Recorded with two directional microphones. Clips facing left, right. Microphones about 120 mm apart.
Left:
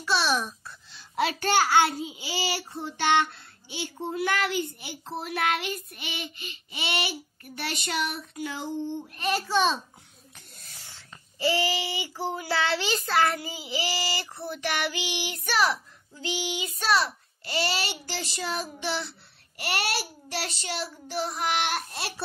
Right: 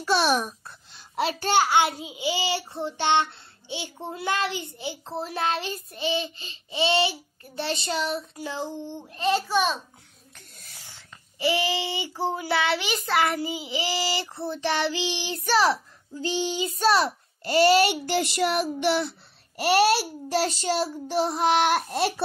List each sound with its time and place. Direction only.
0.0 s a sound: 45° right (ahead or behind)
1.5 s child singing: 20° right (ahead or behind)
10.9 s child singing: 15° right (ahead or behind); by 19.1 s 55° right (ahead or behind)
20.2 s child singing: 35° right (ahead or behind)
21.5 s speech: 45° right (ahead or behind)